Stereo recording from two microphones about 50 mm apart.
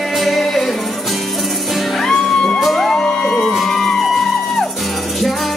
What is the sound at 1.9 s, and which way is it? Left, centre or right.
Music, centre.